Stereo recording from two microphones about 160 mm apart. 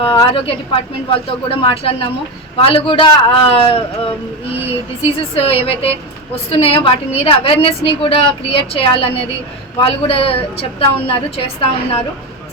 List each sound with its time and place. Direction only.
0.2 s a woman's voice: 35° left (ahead or behind)